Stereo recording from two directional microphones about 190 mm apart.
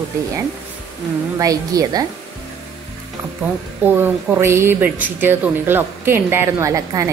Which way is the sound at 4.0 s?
10° right (ahead or behind).